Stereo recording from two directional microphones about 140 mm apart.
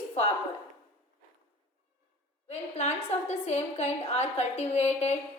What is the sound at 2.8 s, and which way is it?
A woman's voice, 50° left (ahead or behind).